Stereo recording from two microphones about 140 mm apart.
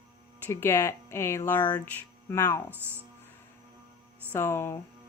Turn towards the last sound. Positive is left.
turn(degrees=20)  # may be behind; listen again after turning